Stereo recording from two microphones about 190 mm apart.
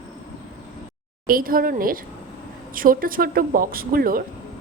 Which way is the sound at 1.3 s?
50° right (ahead or behind).